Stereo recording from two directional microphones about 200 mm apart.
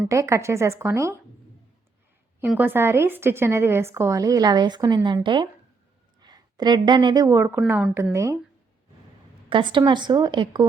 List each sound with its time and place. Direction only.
0.1 s a woman's voice: 15° right (ahead or behind)
2.4 s a woman's voice: 10° right (ahead or behind)
9.5 s speech: 25° right (ahead or behind)